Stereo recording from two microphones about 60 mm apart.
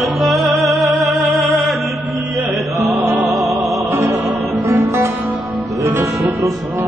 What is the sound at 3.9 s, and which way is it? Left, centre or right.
Music, right.